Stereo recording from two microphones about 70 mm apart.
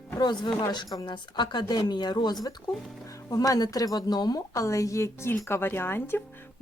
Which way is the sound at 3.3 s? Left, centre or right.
Left.